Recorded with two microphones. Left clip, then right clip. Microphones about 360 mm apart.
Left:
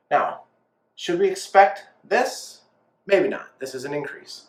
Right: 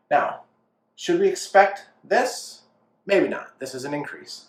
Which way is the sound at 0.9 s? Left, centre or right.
Centre.